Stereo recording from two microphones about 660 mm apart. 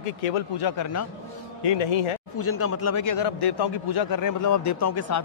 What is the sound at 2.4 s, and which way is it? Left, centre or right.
A man's voice, centre.